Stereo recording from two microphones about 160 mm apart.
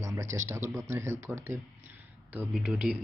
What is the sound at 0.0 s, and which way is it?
Speech, 20° right (ahead or behind).